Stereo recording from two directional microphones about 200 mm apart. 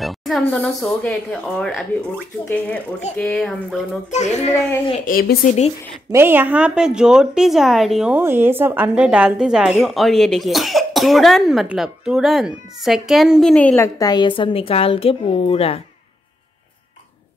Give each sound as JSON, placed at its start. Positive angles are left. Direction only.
{"t": 0.0, "sound": "a woman's voice", "side_deg": 0}
{"t": 3.2, "sound": "a woman's voice", "side_deg": 5}
{"t": 4.1, "sound": "a child's voice", "side_deg": 35}
{"t": 4.5, "sound": "a child's voice", "side_deg": 15}
{"t": 5.0, "sound": "speech", "side_deg": 45}
{"t": 6.1, "sound": "a woman's voice", "side_deg": -10}